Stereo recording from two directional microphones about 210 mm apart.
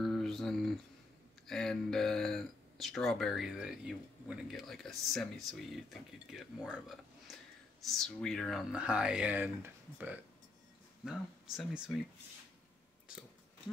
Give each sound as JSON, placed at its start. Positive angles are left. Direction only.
{"t": 0.0, "sound": "mantra", "side_deg": 0}
{"t": 1.5, "sound": "speech", "side_deg": 0}